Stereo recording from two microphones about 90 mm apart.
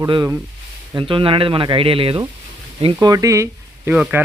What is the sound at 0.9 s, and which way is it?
Speech, 75° right (ahead or behind).